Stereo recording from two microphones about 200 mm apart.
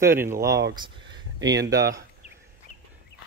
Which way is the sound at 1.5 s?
60° right (ahead or behind).